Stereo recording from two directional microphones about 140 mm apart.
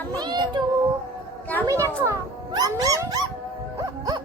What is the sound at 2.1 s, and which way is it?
Dog, 25° right (ahead or behind).